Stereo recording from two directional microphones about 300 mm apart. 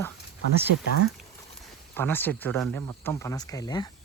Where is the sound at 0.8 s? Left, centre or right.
Left.